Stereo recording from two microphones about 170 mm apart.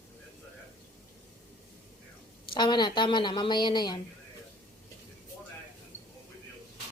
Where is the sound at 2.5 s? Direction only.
25° left (ahead or behind).